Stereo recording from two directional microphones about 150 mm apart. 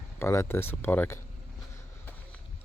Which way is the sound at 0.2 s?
15° left (ahead or behind).